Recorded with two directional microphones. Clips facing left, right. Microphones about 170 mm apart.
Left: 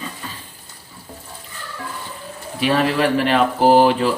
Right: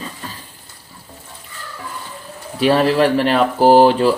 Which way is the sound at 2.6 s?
35° right (ahead or behind).